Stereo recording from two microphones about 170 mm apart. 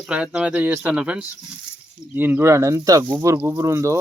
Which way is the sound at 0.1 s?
5° right (ahead or behind).